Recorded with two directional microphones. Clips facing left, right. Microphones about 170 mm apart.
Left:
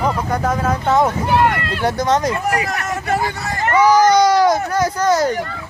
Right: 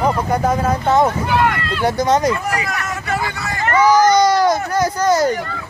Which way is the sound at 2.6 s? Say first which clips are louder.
Left 2 dB; 45° left (ahead or behind).